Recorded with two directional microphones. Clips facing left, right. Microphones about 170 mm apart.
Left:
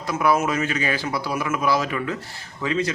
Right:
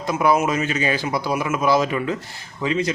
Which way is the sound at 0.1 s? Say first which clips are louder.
Right 2 dB; 20° right (ahead or behind).